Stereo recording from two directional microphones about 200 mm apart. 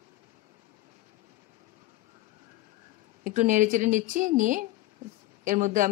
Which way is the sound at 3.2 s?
40° right (ahead or behind).